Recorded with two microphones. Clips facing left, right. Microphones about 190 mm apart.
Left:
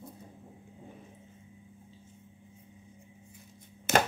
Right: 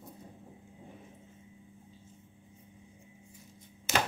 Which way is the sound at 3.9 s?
60° left (ahead or behind).